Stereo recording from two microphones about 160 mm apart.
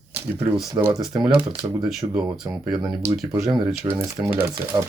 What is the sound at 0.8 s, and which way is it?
Speech, 20° right (ahead or behind).